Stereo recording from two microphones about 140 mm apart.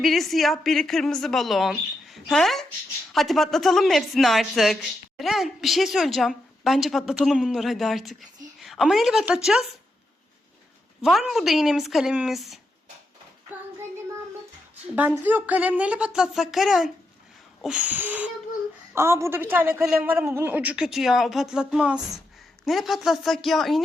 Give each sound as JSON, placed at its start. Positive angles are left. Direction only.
{"t": 0.0, "sound": "speech", "side_deg": 0}
{"t": 11.0, "sound": "speech", "side_deg": 0}
{"t": 14.9, "sound": "a woman's voice", "side_deg": -10}